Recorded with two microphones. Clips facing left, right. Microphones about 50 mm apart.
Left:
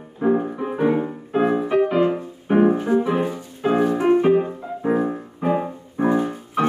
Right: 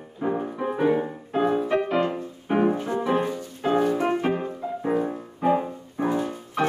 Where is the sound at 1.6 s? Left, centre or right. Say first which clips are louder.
Left 5 dB; centre; by 6.4 s left.